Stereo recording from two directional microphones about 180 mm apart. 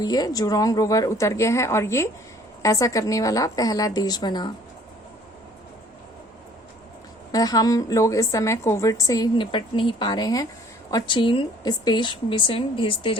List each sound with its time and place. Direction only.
0.0 s a woman's voice: 20° left (ahead or behind)
7.3 s a woman's voice: 20° left (ahead or behind)